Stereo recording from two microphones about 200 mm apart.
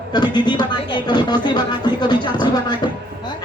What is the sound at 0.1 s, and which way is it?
Speech, 20° left (ahead or behind).